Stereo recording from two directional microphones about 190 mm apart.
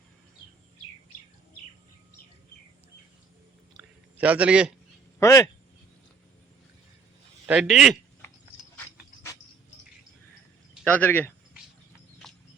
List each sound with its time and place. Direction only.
4.2 s a man's voice: 5° right (ahead or behind)
5.2 s speech: 15° left (ahead or behind)
7.4 s a man's voice: 5° right (ahead or behind)
10.8 s speech: 10° left (ahead or behind)
12.2 s horse: centre (ahead or behind)